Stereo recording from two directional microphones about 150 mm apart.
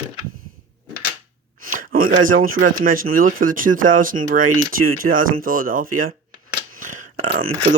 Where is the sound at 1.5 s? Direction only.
70° right (ahead or behind).